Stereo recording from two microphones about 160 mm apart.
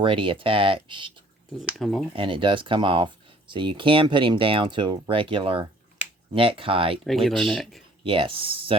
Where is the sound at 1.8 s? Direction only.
Centre (ahead or behind).